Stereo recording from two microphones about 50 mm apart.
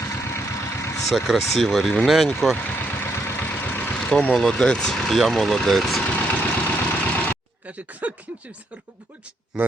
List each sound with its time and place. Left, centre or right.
0.0 s vehicle: left
1.5 s speech: centre
2.6 s vehicle: left
3.1 s vehicle: left
3.3 s vehicle: left
4.4 s speech: centre
6.1 s vehicle: left
7.6 s speech: right